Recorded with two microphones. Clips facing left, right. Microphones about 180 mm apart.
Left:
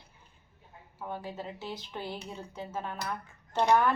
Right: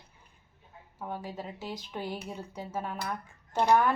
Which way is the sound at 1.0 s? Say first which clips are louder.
Even; 10° right (ahead or behind).